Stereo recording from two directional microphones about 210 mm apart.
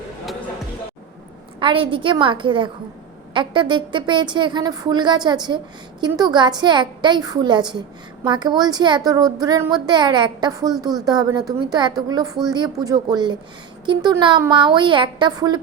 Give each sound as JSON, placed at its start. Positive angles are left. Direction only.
{"t": 1.5, "sound": "a woman's voice", "side_deg": -25}